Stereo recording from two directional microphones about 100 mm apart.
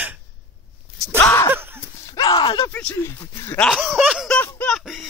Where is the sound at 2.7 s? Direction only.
15° left (ahead or behind).